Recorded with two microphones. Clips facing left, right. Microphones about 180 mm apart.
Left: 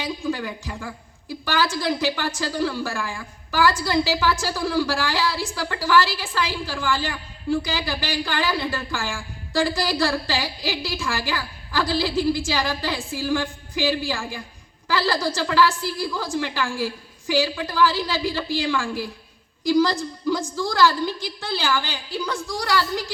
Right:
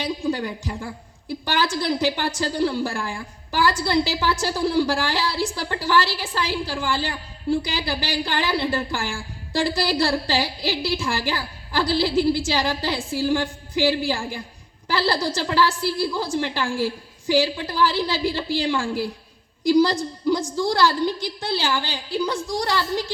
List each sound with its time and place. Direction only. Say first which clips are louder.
0.2 s music: right 2 dB; 35° right (ahead or behind)
1.6 s a woman's voice: right 1 dB; 30° right (ahead or behind)